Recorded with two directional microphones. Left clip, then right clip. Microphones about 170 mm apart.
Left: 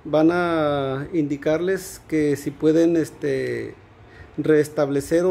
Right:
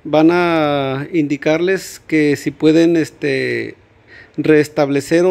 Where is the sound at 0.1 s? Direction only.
30° right (ahead or behind).